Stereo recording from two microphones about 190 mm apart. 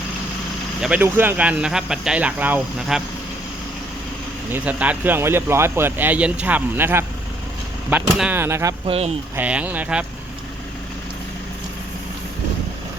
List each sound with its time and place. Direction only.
0.8 s speech: 5° right (ahead or behind)
4.5 s speech: 5° right (ahead or behind)
8.2 s speech: 10° right (ahead or behind)
8.9 s speech: 35° right (ahead or behind)
9.3 s speech: 10° right (ahead or behind)